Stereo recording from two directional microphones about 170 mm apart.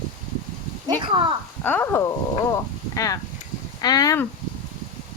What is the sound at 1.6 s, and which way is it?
Speech, 10° left (ahead or behind).